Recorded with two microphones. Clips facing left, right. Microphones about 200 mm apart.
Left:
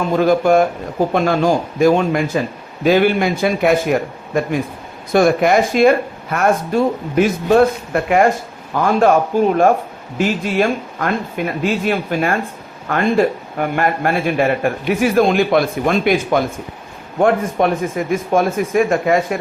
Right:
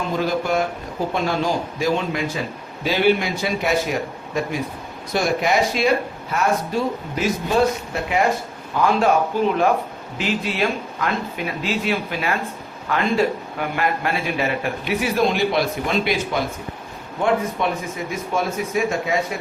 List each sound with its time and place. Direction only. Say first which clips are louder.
0.2 s a man's voice: left 9 dB; 50° left (ahead or behind)